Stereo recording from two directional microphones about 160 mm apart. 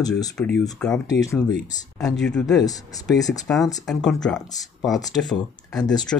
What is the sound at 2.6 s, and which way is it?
Speech, 20° left (ahead or behind).